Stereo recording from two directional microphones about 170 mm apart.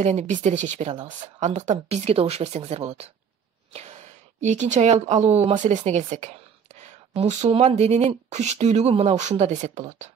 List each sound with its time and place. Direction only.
0.0 s speech: 40° right (ahead or behind)